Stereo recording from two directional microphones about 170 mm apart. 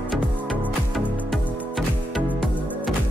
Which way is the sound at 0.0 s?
10° right (ahead or behind).